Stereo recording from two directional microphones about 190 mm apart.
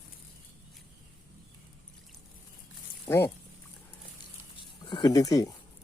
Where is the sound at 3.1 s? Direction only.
5° left (ahead or behind).